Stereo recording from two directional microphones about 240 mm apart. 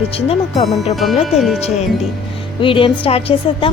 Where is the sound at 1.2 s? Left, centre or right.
Centre.